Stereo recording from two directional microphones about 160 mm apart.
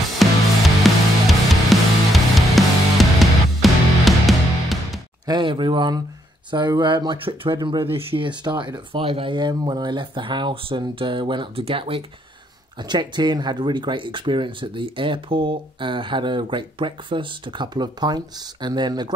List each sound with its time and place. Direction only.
0.2 s music: centre (ahead or behind)
5.2 s speech: 30° right (ahead or behind)